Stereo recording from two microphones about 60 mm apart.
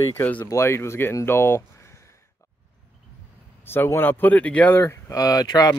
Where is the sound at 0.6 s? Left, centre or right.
Left.